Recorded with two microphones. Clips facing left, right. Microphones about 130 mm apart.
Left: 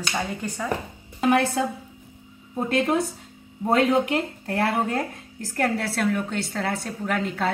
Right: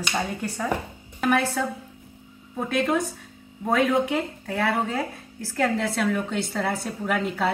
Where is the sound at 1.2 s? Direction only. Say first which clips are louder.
Left 2 dB; 20° left (ahead or behind).